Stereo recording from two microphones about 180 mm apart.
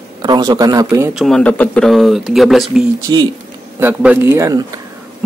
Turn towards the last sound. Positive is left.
turn(degrees=-20)  # may be behind; listen again after turning